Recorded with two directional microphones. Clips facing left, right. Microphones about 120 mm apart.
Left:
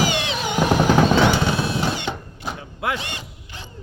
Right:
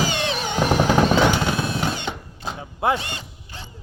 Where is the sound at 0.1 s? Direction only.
35° right (ahead or behind).